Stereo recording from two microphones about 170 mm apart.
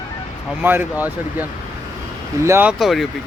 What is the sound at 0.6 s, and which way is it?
Speech, 10° right (ahead or behind).